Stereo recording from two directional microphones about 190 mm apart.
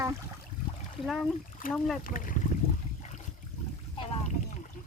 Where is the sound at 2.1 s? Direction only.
45° left (ahead or behind).